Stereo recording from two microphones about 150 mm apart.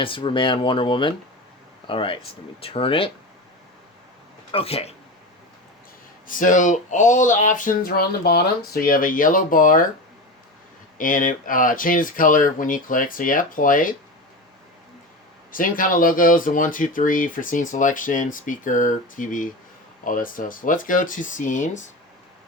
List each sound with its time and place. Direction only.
0.0 s speech: 35° left (ahead or behind)
4.5 s speech: 40° left (ahead or behind)
6.2 s speech: 60° left (ahead or behind)
10.9 s speech: 65° left (ahead or behind)
15.5 s speech: 65° left (ahead or behind)